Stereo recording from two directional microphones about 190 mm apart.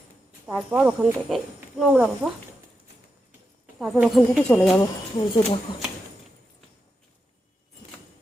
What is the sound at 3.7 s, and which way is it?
A woman's voice, centre (ahead or behind).